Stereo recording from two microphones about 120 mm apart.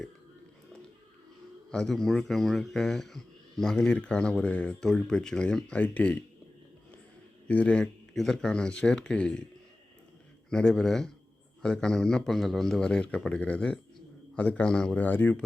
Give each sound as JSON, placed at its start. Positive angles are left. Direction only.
{"t": 1.7, "sound": "speech", "side_deg": 5}
{"t": 7.4, "sound": "speech", "side_deg": 10}
{"t": 10.5, "sound": "speech", "side_deg": 5}